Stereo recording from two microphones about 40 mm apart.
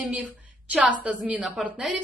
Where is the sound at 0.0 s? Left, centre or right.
Right.